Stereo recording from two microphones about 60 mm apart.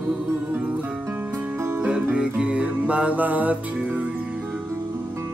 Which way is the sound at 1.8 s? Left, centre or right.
Centre.